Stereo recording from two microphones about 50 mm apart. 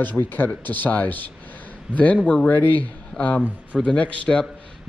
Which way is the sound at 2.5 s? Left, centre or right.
Left.